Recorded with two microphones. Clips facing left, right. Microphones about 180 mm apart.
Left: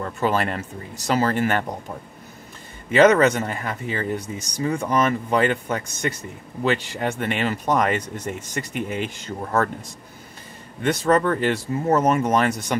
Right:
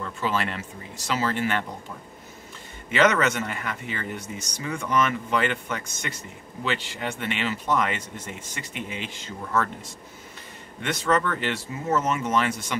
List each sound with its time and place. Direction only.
0.0 s speech: 50° left (ahead or behind)
2.9 s speech: 35° left (ahead or behind)
10.8 s speech: 35° left (ahead or behind)
11.9 s speech: 55° left (ahead or behind)
12.2 s speech: 40° left (ahead or behind)